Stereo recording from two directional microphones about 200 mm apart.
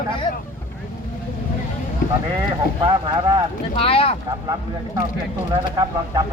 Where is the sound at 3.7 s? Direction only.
30° left (ahead or behind).